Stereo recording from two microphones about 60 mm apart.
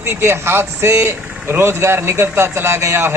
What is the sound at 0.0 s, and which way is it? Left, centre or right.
Speech, right.